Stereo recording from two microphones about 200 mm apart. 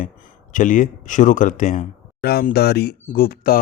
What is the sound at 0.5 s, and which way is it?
Speech, 40° left (ahead or behind).